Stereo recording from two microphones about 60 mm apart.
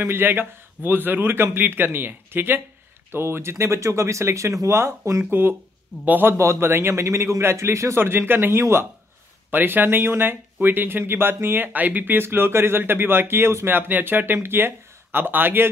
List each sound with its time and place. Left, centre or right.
0.0 s speech: right
5.3 s speech: right
6.3 s speech: right
8.0 s speech: right
9.5 s speech: right